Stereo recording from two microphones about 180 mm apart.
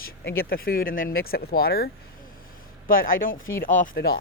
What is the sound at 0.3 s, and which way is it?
Speech, 55° left (ahead or behind).